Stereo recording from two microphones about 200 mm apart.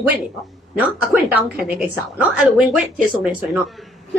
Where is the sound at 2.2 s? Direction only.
5° right (ahead or behind).